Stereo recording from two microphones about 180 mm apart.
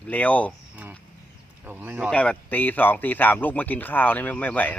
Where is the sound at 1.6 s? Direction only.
10° right (ahead or behind).